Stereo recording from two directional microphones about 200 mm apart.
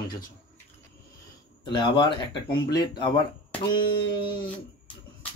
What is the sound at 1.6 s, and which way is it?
Speech, 20° left (ahead or behind).